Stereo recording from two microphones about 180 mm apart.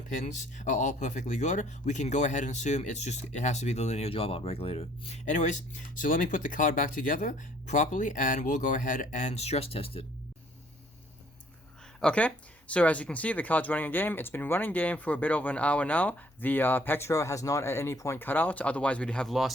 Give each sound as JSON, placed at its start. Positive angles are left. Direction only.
{"t": 0.2, "sound": "speech", "side_deg": 45}
{"t": 11.9, "sound": "speech", "side_deg": 5}